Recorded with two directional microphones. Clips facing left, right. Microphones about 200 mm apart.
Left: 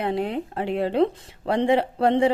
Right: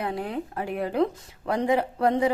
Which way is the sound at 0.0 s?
25° left (ahead or behind).